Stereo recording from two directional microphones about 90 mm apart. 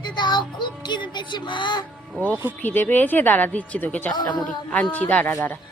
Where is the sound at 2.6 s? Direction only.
20° left (ahead or behind).